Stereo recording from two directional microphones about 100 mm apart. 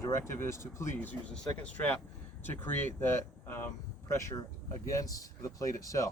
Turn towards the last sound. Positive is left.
turn(degrees=35)  # may be behind; listen again after turning